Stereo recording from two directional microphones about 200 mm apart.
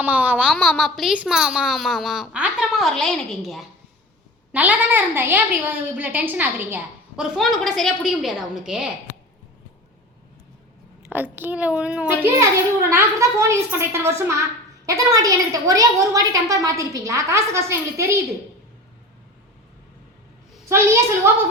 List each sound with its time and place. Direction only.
0.0 s a woman's voice: 10° right (ahead or behind)
11.1 s a woman's voice: 10° right (ahead or behind)
20.7 s a woman's voice: 15° right (ahead or behind)